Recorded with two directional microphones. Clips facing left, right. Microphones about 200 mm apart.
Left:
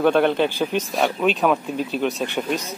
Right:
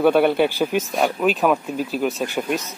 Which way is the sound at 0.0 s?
10° right (ahead or behind).